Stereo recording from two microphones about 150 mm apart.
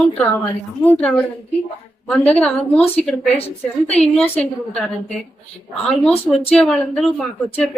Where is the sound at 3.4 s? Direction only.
45° left (ahead or behind).